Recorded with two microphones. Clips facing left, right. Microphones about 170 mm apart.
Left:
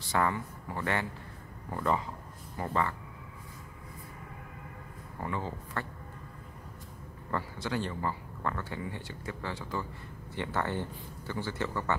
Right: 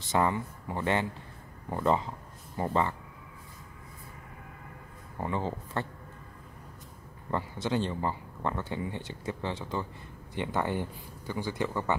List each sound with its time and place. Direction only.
0.0 s speech: 20° right (ahead or behind)
5.2 s speech: 25° right (ahead or behind)
7.2 s speech: 20° right (ahead or behind)